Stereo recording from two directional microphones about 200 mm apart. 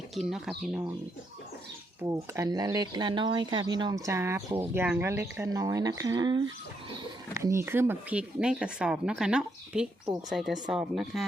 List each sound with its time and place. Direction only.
0.2 s speech: centre (ahead or behind)
2.0 s speech: 15° right (ahead or behind)